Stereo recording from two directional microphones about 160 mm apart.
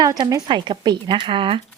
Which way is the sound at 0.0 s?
25° right (ahead or behind).